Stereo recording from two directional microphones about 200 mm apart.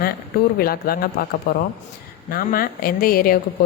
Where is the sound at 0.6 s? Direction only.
50° left (ahead or behind).